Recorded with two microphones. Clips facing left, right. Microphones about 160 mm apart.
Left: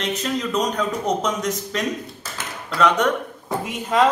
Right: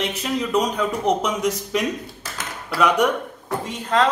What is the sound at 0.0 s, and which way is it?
A man's voice, 10° right (ahead or behind).